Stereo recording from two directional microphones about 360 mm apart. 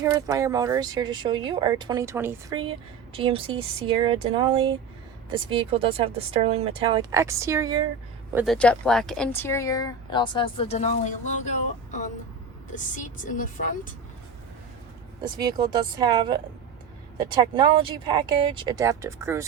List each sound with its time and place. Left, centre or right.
0.0 s speech: centre
13.2 s a woman's voice: left
15.4 s speech: centre